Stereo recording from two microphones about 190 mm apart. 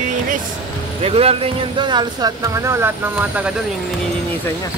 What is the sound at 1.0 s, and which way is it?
Speech, 30° right (ahead or behind).